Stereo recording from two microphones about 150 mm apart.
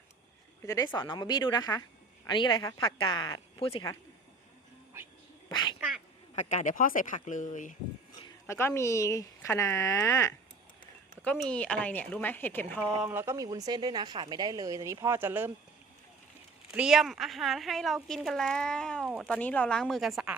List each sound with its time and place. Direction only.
0.6 s speech: 20° left (ahead or behind)
5.5 s cat: 30° left (ahead or behind)
6.3 s speech: 55° left (ahead or behind)
8.4 s speech: 15° left (ahead or behind)
11.2 s speech: 10° left (ahead or behind)
13.0 s speech: 15° right (ahead or behind)
16.7 s a woman's voice: 5° right (ahead or behind)